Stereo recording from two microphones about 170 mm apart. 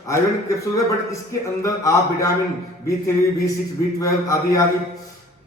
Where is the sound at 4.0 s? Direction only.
20° left (ahead or behind).